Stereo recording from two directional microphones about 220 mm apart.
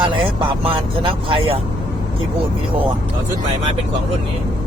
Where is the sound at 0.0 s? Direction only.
20° right (ahead or behind).